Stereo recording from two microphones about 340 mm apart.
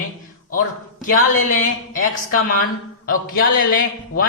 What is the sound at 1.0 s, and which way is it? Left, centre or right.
A woman's voice, left.